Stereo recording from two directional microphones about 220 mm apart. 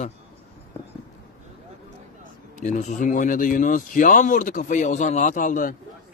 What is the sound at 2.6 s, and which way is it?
Speech, 30° left (ahead or behind).